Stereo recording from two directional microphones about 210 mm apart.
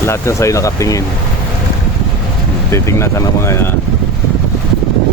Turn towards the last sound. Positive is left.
turn(degrees=10)  # may be behind; listen again after turning